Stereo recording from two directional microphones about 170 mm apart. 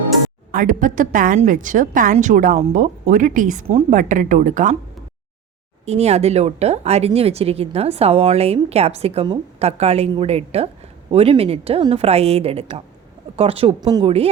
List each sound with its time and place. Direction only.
0.5 s speech: 50° right (ahead or behind)
5.8 s speech: 40° right (ahead or behind)